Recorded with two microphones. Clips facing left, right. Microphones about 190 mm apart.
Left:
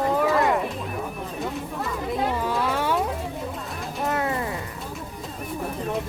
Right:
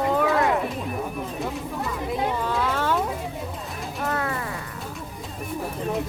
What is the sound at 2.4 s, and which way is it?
Music, 10° left (ahead or behind).